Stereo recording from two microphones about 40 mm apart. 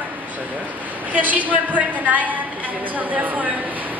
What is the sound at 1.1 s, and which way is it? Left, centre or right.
A woman's voice, right.